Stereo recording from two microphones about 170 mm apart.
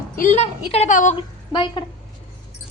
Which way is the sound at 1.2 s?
30° left (ahead or behind).